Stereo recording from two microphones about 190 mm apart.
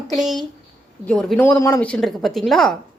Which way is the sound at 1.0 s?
5° left (ahead or behind).